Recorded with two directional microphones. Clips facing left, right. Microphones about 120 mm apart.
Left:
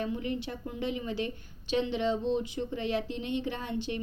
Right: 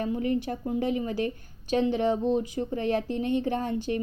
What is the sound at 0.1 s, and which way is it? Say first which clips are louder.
Speech: right 6 dB; 40° right (ahead or behind).